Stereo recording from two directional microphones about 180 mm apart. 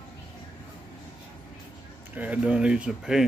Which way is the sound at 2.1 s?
10° right (ahead or behind).